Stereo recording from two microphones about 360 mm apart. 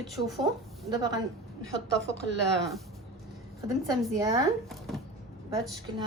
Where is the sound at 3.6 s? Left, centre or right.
Centre.